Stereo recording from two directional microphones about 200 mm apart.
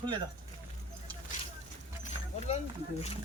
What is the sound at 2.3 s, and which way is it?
Speech, 30° left (ahead or behind).